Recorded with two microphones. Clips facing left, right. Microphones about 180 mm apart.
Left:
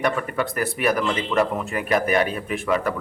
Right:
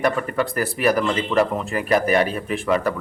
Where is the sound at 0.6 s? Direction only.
Centre (ahead or behind).